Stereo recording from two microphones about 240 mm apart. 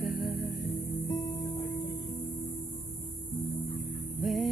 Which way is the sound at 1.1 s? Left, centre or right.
Centre.